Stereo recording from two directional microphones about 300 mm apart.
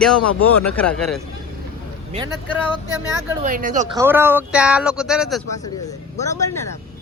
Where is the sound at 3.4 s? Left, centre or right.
Right.